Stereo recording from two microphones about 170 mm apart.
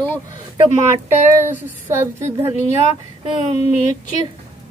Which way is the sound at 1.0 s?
15° right (ahead or behind).